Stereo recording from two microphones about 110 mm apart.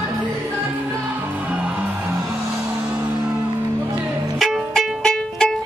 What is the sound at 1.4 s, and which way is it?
Music, 15° right (ahead or behind).